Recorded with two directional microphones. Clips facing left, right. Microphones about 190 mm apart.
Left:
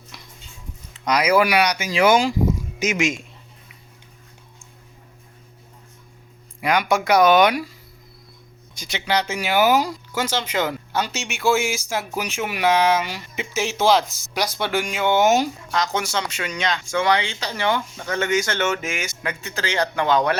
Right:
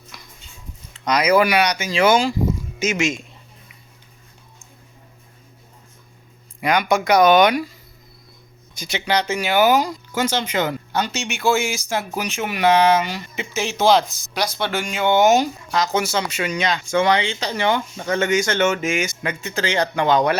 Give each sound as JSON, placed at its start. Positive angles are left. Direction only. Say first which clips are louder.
{"t": 0.1, "sound": "music", "louder": "even", "side_deg": 25}
{"t": 1.0, "sound": "speech", "louder": "right 1 dB", "side_deg": 10}
{"t": 6.6, "sound": "speech", "louder": "right 1 dB", "side_deg": 5}
{"t": 8.7, "sound": "speech", "louder": "right 2 dB", "side_deg": -5}
{"t": 16.9, "sound": "speech", "louder": "right 3 dB", "side_deg": -20}